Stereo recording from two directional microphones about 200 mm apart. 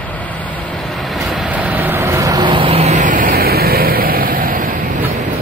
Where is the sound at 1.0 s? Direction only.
Centre (ahead or behind); by 4.7 s 45° right (ahead or behind).